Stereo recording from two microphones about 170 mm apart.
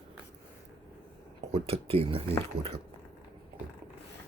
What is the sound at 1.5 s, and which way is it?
Speech, 35° right (ahead or behind).